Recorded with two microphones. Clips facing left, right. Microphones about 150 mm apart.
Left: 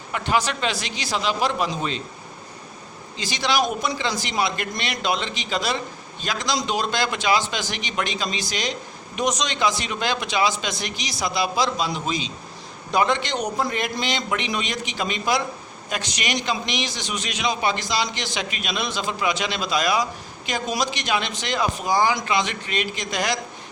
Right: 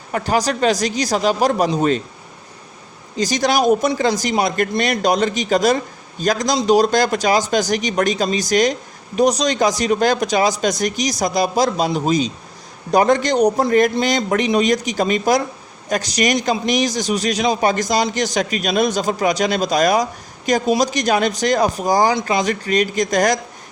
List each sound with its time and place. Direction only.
0.1 s a man's voice: 40° right (ahead or behind)
3.2 s a man's voice: 45° right (ahead or behind)